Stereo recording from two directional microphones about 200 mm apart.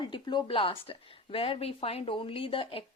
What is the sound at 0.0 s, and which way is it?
Speech, 20° left (ahead or behind).